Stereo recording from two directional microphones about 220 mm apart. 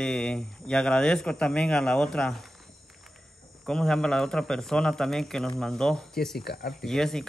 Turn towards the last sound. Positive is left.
turn(degrees=0)  # may be behind; listen again after turning